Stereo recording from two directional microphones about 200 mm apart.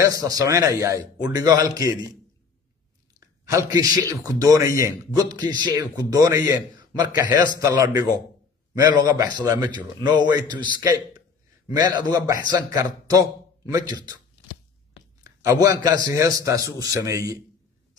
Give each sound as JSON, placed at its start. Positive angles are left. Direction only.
{"t": 0.0, "sound": "a man's voice", "side_deg": -15}
{"t": 3.2, "sound": "a man's voice", "side_deg": -15}
{"t": 15.2, "sound": "a man's voice", "side_deg": -15}